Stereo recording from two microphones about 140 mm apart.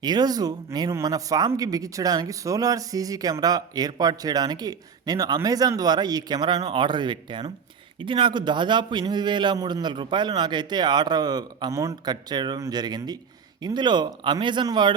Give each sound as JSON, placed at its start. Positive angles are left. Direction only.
{"t": 0.0, "sound": "a man's voice", "side_deg": -30}